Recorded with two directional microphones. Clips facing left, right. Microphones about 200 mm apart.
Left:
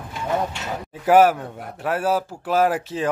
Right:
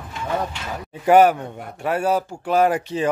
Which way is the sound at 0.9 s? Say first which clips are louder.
Right 1 dB; centre (ahead or behind).